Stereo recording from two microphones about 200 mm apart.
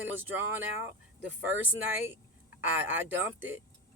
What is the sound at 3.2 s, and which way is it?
Speech, 10° right (ahead or behind).